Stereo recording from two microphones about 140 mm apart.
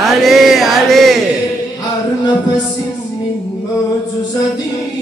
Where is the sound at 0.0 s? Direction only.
Centre (ahead or behind).